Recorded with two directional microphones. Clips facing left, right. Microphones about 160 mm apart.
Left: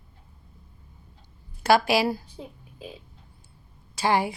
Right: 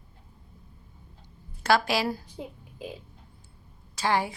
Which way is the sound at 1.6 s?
10° left (ahead or behind).